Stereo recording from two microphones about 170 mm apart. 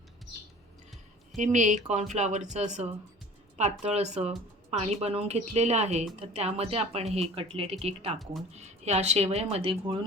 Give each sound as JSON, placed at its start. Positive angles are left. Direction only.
{"t": 1.4, "sound": "speech", "side_deg": -45}
{"t": 8.2, "sound": "speech", "side_deg": 0}
{"t": 8.5, "sound": "speech", "side_deg": -40}